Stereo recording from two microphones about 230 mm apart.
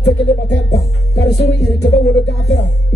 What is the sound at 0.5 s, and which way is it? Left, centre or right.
Music, left.